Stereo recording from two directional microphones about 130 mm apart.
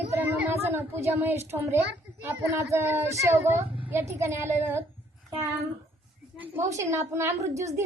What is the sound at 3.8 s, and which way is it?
Speech, 20° right (ahead or behind).